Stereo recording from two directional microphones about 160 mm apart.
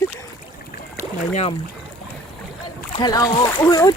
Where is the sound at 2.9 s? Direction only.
25° left (ahead or behind).